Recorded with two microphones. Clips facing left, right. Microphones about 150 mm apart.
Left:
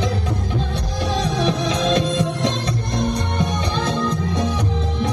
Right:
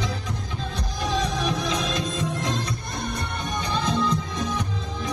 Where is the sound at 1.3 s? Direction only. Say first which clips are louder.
Left 5 dB; 75° left (ahead or behind).